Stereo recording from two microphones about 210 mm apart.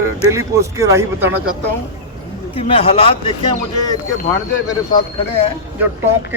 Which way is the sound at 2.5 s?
25° left (ahead or behind).